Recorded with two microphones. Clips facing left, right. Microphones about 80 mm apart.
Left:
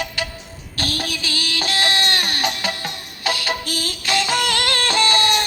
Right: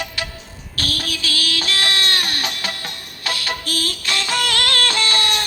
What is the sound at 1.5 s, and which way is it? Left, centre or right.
Music, centre.